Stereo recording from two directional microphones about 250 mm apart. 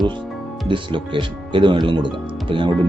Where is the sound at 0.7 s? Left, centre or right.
Centre.